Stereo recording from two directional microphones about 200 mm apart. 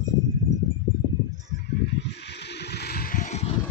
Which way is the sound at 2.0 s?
55° left (ahead or behind).